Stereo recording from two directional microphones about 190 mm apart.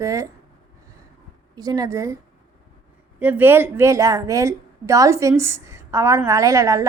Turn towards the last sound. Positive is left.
turn(degrees=-15)  # may be behind; listen again after turning